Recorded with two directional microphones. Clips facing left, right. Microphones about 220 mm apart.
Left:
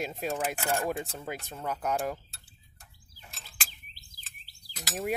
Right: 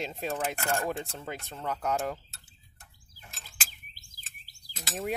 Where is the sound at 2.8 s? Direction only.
Centre (ahead or behind).